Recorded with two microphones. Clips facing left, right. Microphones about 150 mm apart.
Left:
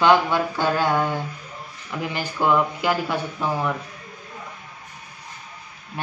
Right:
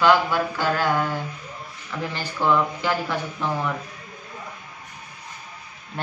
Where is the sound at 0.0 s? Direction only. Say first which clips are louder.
Left 1 dB; 20° left (ahead or behind).